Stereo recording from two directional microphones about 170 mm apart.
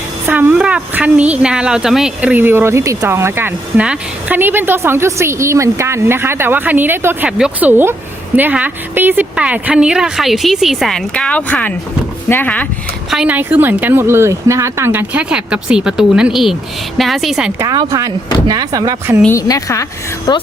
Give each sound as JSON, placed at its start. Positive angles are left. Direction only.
{"t": 0.3, "sound": "a woman's voice", "side_deg": -10}
{"t": 13.1, "sound": "a woman's voice", "side_deg": -5}
{"t": 17.6, "sound": "speech", "side_deg": -20}
{"t": 19.2, "sound": "a woman's voice", "side_deg": 15}